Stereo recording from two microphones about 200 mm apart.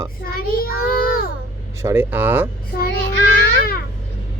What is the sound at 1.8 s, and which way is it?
Speech, 15° right (ahead or behind).